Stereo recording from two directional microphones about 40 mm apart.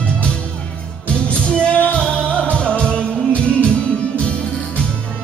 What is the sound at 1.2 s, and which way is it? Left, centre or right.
Music, left.